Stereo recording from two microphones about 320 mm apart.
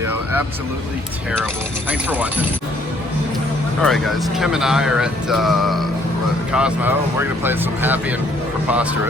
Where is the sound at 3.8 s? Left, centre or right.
Centre.